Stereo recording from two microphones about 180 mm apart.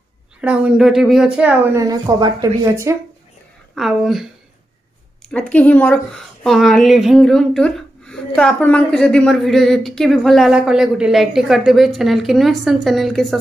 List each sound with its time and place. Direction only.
0.4 s speech: 5° right (ahead or behind)
3.7 s a woman's voice: centre (ahead or behind)